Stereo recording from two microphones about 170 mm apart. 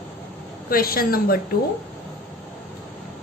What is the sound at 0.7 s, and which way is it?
Speech, 60° left (ahead or behind).